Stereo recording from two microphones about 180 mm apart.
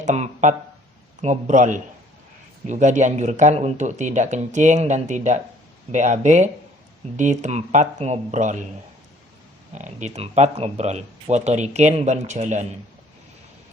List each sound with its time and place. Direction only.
0.0 s a sound: 40° right (ahead or behind)
1.2 s speech: 40° right (ahead or behind)
9.7 s speech: 40° right (ahead or behind)